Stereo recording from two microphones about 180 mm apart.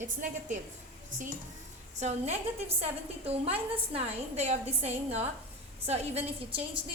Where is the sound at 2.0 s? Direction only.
40° right (ahead or behind).